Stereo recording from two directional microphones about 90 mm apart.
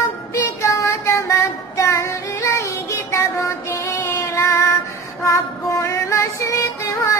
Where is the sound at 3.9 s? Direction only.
30° left (ahead or behind).